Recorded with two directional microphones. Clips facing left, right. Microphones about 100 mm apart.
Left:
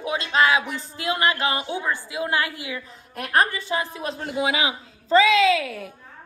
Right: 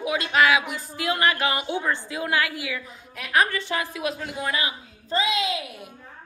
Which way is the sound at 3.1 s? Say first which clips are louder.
Left 1 dB; 45° left (ahead or behind).